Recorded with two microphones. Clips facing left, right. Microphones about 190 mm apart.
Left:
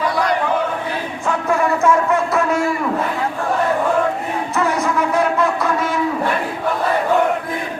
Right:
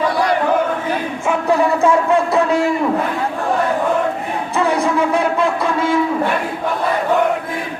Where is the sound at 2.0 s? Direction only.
15° right (ahead or behind).